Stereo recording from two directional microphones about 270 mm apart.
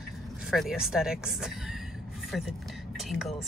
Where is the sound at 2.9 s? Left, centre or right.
Centre.